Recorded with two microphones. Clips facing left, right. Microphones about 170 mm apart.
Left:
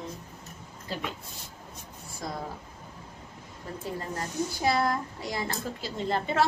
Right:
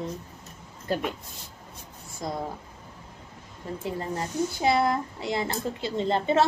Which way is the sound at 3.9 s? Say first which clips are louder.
Right 3 dB; 20° right (ahead or behind).